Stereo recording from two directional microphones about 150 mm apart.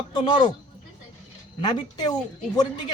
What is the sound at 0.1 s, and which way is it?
Speech, 30° left (ahead or behind).